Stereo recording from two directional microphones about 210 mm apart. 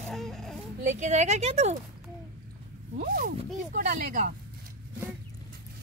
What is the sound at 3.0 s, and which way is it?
Speech, 40° right (ahead or behind).